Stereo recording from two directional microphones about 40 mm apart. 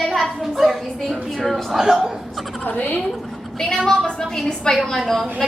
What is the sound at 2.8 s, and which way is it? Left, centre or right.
Speech, left.